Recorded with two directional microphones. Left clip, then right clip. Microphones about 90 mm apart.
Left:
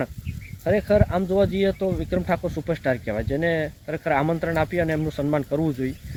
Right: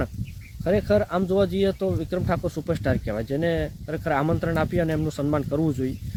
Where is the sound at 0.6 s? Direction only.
25° right (ahead or behind).